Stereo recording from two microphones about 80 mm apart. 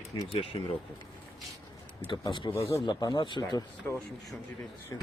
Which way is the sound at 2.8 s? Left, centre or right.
Left.